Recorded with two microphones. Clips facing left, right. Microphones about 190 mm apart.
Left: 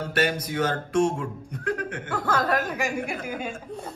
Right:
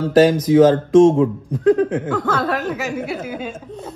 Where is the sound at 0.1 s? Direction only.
90° right.